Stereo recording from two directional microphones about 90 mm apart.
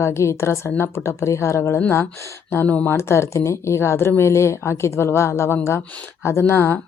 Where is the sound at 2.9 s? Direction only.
30° left (ahead or behind).